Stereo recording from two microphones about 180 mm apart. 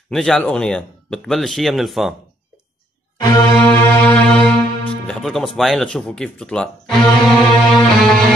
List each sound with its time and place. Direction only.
0.1 s speech: centre (ahead or behind)
3.2 s music: 20° left (ahead or behind)
3.5 s music: 10° left (ahead or behind)
5.0 s speech: centre (ahead or behind)